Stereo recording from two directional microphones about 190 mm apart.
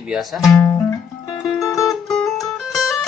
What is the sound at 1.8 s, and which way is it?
Music, centre (ahead or behind).